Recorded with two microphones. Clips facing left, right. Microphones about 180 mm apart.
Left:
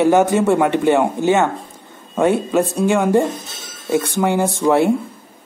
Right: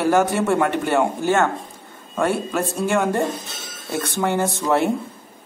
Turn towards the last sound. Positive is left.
turn(degrees=15)  # may be behind; listen again after turning